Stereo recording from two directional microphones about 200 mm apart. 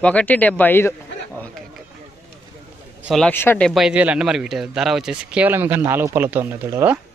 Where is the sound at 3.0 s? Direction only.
Centre (ahead or behind).